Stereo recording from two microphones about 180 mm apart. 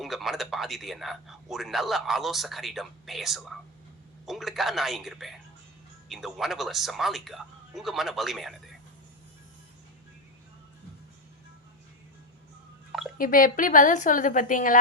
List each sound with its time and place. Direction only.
0.0 s speech: centre (ahead or behind)
13.1 s a woman's voice: 50° left (ahead or behind)